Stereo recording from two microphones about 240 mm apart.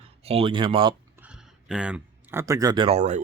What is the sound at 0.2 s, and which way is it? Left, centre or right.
Speech, right.